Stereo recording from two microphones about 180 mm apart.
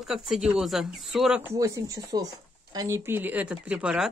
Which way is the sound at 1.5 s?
15° right (ahead or behind).